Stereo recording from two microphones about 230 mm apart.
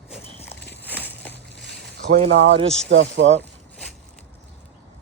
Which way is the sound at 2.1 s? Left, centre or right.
Right.